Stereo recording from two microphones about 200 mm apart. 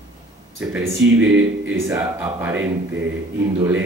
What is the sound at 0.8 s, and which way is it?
Speech, 70° right (ahead or behind).